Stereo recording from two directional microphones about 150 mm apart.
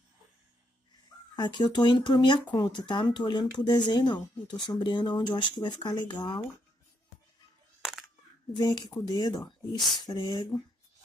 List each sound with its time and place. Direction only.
1.3 s speech: 30° left (ahead or behind)
8.5 s speech: 30° left (ahead or behind)